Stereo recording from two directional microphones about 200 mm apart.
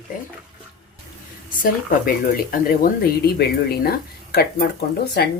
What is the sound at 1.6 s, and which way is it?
Speech, 45° left (ahead or behind).